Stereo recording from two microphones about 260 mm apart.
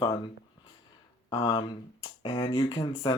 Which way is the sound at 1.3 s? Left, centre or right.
Centre.